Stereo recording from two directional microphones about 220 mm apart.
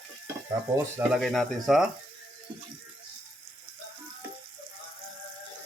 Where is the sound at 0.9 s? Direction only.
Centre (ahead or behind).